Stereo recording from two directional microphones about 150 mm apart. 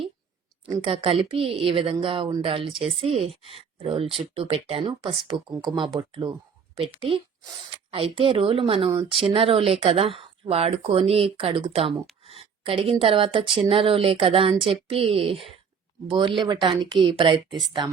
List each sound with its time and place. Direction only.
0.7 s speech: 35° right (ahead or behind)